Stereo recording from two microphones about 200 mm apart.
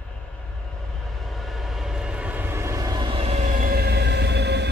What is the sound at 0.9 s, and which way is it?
Train, centre (ahead or behind).